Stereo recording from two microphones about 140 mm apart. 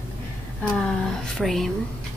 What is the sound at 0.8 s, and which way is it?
Speech, 5° left (ahead or behind).